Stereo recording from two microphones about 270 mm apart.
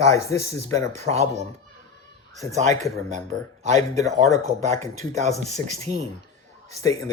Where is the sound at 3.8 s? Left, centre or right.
Centre.